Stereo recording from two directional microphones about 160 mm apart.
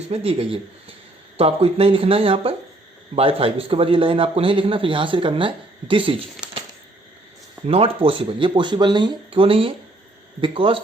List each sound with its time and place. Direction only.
0.1 s a man's voice: 40° right (ahead or behind)
7.7 s a man's voice: 35° right (ahead or behind)